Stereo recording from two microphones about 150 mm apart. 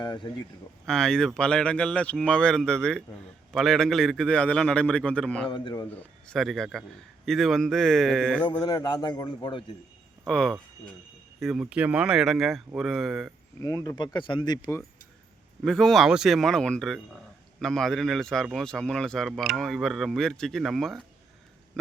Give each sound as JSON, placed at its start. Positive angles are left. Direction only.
{"t": 0.0, "sound": "speech", "side_deg": 30}
{"t": 0.9, "sound": "a man's voice", "side_deg": 5}
{"t": 5.5, "sound": "a man's voice", "side_deg": 35}
{"t": 5.9, "sound": "speech", "side_deg": 10}
{"t": 8.6, "sound": "speech", "side_deg": 30}
{"t": 10.2, "sound": "speech", "side_deg": 5}
{"t": 13.6, "sound": "speech", "side_deg": 20}
{"t": 15.6, "sound": "speech", "side_deg": 5}